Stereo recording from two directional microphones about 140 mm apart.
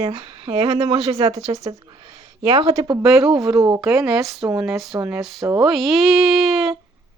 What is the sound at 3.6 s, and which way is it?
Speech, 25° right (ahead or behind).